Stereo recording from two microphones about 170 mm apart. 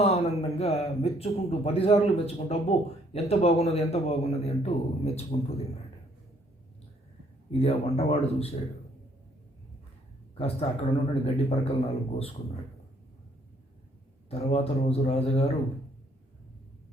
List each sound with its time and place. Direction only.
0.0 s speech: 35° left (ahead or behind)
7.6 s speech: 35° left (ahead or behind)
10.3 s speech: 35° left (ahead or behind)
14.3 s speech: 35° left (ahead or behind)